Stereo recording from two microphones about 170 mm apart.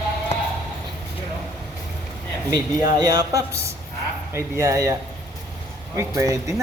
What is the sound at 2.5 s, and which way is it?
A man's voice, 25° right (ahead or behind).